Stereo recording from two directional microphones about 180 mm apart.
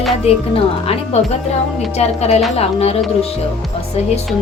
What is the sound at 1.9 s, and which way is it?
A woman's voice, 35° left (ahead or behind).